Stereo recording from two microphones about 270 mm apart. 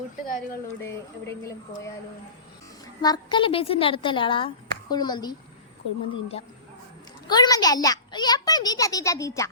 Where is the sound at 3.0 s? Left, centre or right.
Centre.